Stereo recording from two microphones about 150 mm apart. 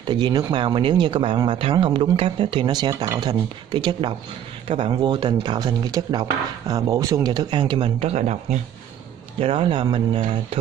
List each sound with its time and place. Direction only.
0.1 s speech: 30° right (ahead or behind); by 8.5 s 50° right (ahead or behind)
9.4 s speech: 35° right (ahead or behind)